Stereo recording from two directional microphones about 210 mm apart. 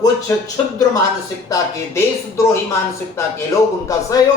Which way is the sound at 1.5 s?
15° left (ahead or behind).